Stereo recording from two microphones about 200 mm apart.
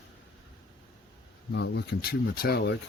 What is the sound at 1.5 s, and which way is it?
Speech, 60° left (ahead or behind).